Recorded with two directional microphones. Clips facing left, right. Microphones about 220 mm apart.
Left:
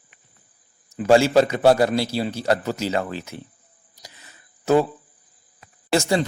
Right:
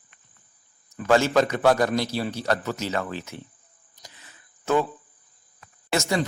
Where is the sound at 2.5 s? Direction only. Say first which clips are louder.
Left 4 dB; 30° left (ahead or behind).